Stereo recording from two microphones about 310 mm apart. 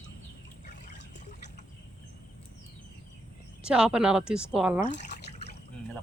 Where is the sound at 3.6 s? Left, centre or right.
Centre.